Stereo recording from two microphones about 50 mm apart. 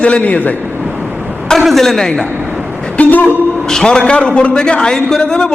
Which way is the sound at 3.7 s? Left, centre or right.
Centre.